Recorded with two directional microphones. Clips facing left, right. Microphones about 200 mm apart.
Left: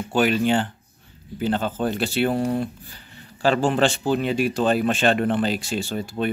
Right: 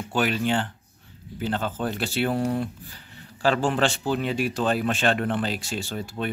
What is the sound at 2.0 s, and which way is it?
Speech, 5° right (ahead or behind).